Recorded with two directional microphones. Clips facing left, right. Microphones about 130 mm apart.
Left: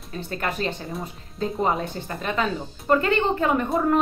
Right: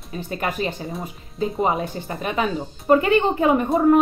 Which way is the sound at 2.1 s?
15° right (ahead or behind).